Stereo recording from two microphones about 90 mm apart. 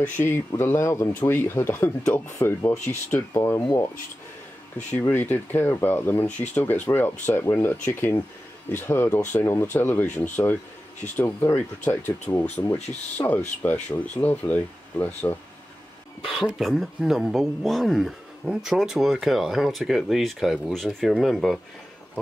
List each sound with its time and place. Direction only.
0.2 s speech: 25° left (ahead or behind)
5.0 s speech: 20° left (ahead or behind)
16.4 s speech: centre (ahead or behind)